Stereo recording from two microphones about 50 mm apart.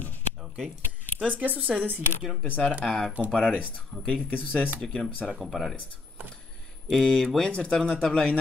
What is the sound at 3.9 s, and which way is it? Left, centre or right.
Speech, centre.